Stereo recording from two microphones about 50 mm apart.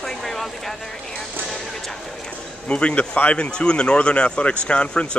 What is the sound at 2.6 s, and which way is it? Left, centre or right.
Speech, left.